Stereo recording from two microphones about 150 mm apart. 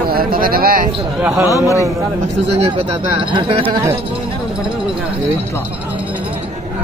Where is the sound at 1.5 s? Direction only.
20° left (ahead or behind).